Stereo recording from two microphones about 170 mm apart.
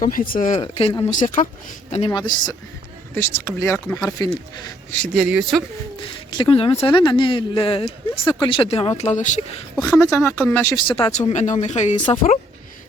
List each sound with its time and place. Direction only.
0.0 s speech: 55° left (ahead or behind)
0.6 s a man's voice: 35° left (ahead or behind)
3.2 s speech: 15° left (ahead or behind)
4.9 s speech: 5° left (ahead or behind)
6.0 s speech: 30° left (ahead or behind)
9.0 s speech: 45° left (ahead or behind)
10.0 s speech: 15° left (ahead or behind)
10.8 s a man's voice: 30° left (ahead or behind)
11.1 s speech: 40° left (ahead or behind)